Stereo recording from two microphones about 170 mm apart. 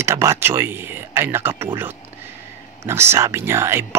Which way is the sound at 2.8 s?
15° right (ahead or behind).